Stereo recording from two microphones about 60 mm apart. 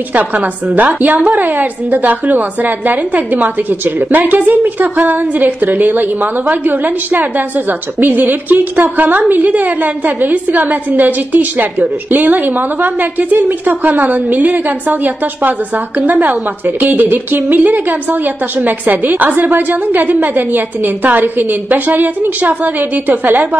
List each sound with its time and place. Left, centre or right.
0.1 s a woman's voice: right